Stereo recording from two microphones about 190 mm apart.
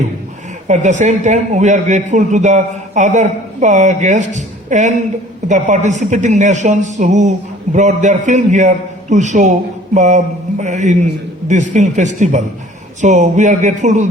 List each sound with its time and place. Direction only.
0.7 s a woman's voice: 40° right (ahead or behind)